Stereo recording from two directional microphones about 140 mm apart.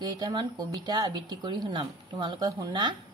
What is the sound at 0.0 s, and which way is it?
Speech, 30° right (ahead or behind).